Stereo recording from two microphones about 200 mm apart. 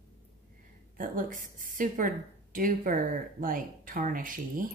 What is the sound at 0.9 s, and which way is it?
A woman's voice, 45° right (ahead or behind).